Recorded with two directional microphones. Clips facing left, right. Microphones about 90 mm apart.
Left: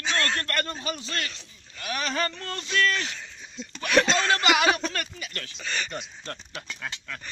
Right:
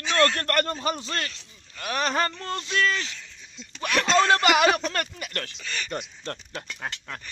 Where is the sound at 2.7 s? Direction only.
10° right (ahead or behind).